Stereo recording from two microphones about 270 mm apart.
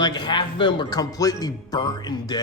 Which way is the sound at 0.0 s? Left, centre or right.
Centre.